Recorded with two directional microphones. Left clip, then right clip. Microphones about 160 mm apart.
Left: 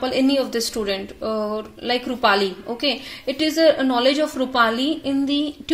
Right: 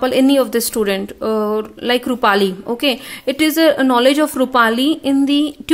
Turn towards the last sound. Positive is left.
turn(degrees=-50)  # may be behind; listen again after turning